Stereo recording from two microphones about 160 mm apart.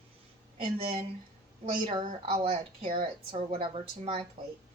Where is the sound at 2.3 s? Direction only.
40° right (ahead or behind).